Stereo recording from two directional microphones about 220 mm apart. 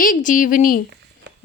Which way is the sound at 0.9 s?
50° right (ahead or behind).